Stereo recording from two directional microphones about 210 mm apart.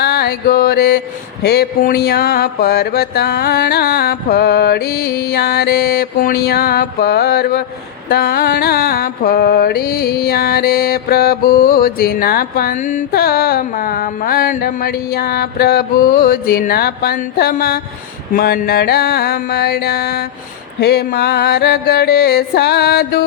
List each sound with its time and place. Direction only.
0.0 s mantra: 50° left (ahead or behind)